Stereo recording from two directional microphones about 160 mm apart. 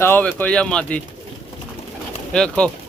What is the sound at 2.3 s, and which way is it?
Speech, 5° left (ahead or behind).